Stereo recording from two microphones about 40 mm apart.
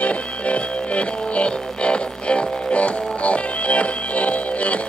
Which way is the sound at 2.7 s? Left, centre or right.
Left.